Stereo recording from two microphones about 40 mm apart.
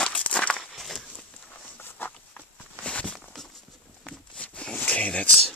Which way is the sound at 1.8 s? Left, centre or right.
Left.